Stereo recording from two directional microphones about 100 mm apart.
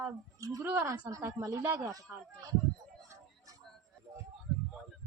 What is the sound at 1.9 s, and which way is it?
Speech, 35° right (ahead or behind).